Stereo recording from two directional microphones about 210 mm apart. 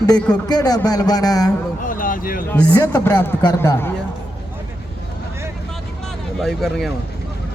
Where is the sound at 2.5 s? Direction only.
5° left (ahead or behind).